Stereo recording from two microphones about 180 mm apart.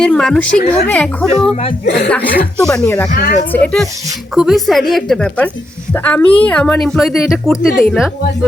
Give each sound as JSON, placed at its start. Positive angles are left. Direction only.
{"t": 0.0, "sound": "a woman's voice", "side_deg": 5}
{"t": 1.8, "sound": "speech", "side_deg": 65}
{"t": 2.6, "sound": "a woman's voice", "side_deg": 5}
{"t": 3.2, "sound": "speech", "side_deg": 55}
{"t": 3.5, "sound": "a woman's voice", "side_deg": 5}